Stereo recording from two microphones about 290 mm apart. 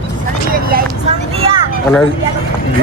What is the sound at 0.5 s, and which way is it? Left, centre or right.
Vehicle, right.